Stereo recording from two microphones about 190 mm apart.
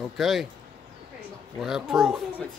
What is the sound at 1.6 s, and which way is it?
Speech, centre (ahead or behind).